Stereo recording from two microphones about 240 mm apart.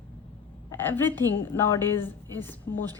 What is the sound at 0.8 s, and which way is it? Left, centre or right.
A woman's voice, centre.